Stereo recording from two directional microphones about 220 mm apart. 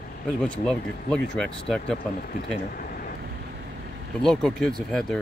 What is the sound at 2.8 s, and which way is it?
Vehicle, 40° left (ahead or behind).